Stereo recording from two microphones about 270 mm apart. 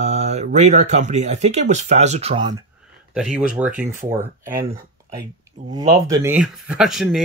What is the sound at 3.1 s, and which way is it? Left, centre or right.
Speech, centre.